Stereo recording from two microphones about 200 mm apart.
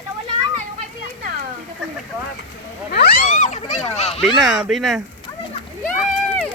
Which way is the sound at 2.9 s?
50° left (ahead or behind).